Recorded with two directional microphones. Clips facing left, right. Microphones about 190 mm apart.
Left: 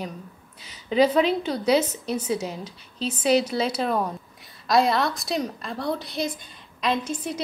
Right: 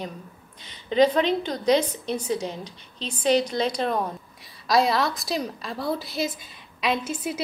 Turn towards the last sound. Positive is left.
turn(degrees=-5)  # may be behind; listen again after turning